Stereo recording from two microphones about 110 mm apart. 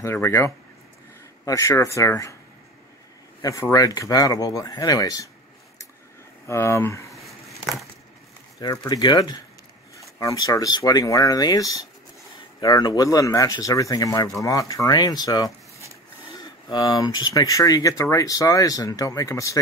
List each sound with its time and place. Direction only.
0.0 s speech: 20° left (ahead or behind)
3.4 s speech: 30° left (ahead or behind)
6.4 s speech: 25° left (ahead or behind)
7.1 s a sound: centre (ahead or behind)
8.5 s speech: 35° left (ahead or behind)